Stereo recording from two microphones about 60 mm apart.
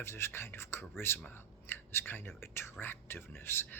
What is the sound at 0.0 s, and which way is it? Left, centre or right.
Speech, left.